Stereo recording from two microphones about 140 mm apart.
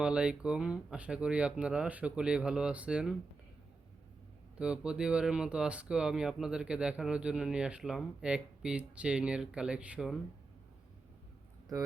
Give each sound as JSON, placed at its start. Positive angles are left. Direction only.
{"t": 0.0, "sound": "speech", "side_deg": -5}
{"t": 4.5, "sound": "speech", "side_deg": -5}